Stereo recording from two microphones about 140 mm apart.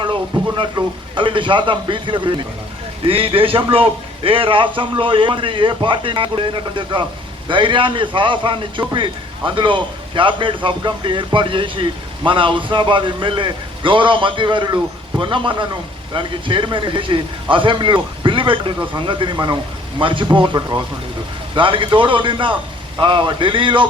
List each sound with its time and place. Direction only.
0.0 s a man's voice: 35° right (ahead or behind)